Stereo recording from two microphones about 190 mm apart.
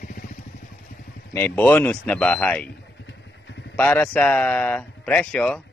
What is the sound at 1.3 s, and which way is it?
Speech, 10° left (ahead or behind).